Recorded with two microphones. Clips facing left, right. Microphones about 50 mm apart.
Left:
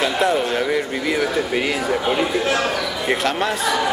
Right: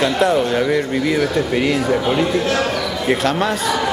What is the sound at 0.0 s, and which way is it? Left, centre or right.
A man's voice, centre.